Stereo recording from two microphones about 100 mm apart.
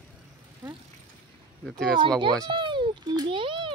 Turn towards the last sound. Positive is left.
turn(degrees=-55)  # may be behind; listen again after turning